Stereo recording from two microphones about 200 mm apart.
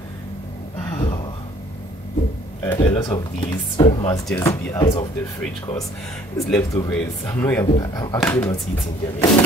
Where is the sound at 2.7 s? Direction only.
25° left (ahead or behind).